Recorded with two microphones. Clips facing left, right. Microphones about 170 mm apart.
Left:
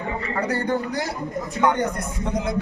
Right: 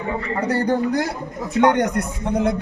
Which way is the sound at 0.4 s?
35° right (ahead or behind).